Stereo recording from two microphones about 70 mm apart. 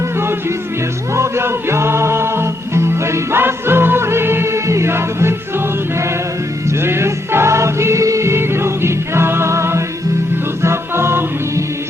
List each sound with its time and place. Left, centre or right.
1.1 s music: right
6.8 s music: right